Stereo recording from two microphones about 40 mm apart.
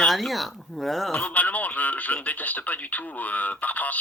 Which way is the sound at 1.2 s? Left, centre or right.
Left.